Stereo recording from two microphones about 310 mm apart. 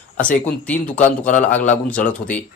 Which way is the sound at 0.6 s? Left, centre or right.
Centre.